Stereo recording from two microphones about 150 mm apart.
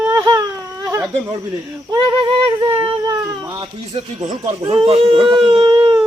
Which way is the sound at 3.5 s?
40° right (ahead or behind).